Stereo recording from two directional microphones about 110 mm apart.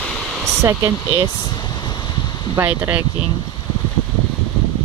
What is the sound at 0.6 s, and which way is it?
Speech, 25° right (ahead or behind).